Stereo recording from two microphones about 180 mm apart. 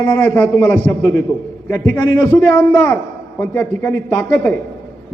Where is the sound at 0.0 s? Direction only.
10° left (ahead or behind).